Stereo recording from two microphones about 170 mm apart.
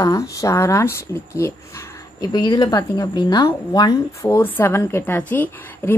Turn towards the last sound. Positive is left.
turn(degrees=10)  # may be behind; listen again after turning